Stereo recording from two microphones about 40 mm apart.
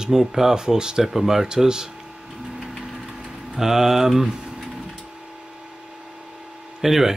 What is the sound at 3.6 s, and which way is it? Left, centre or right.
Speech, centre.